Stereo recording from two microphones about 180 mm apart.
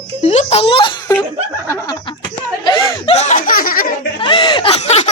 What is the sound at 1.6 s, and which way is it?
Chuckle, 20° left (ahead or behind).